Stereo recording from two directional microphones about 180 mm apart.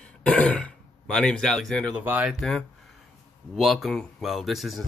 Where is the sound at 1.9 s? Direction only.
10° right (ahead or behind).